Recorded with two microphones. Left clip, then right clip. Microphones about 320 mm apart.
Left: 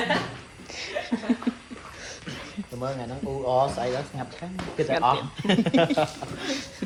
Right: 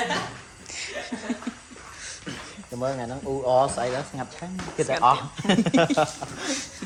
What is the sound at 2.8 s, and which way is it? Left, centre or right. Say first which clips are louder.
Speech: right 3 dB; right.